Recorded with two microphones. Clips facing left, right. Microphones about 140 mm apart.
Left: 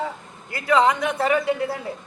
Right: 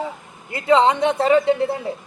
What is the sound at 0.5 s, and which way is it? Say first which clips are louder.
Speech: right 3 dB; 25° right (ahead or behind).